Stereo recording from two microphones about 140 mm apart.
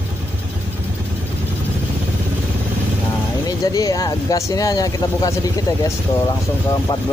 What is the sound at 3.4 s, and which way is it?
Speech, 25° left (ahead or behind).